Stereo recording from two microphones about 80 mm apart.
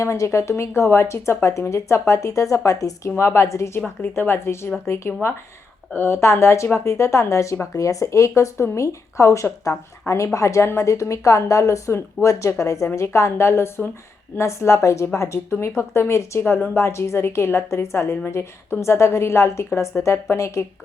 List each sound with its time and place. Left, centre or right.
0.0 s speech: left
3.8 s speech: left